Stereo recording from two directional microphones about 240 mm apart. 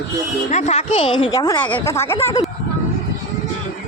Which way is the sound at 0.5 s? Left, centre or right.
Left.